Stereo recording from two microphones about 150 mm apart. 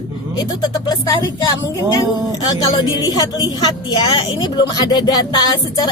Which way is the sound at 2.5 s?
30° left (ahead or behind).